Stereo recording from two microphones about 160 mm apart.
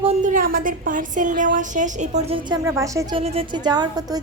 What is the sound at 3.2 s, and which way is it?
A woman's voice, 35° right (ahead or behind).